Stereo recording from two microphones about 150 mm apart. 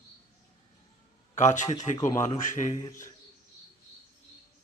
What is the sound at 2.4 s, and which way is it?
Speech, 55° left (ahead or behind).